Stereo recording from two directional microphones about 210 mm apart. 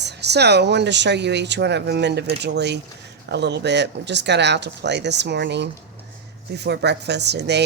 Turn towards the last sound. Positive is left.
turn(degrees=-55)  # may be behind; listen again after turning